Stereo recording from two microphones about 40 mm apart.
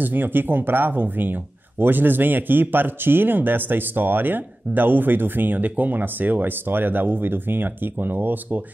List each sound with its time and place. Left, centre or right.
0.0 s speech: right